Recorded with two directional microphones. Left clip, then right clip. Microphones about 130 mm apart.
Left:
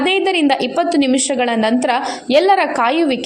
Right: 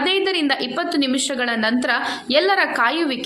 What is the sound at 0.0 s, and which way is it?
A woman's voice, 40° left (ahead or behind).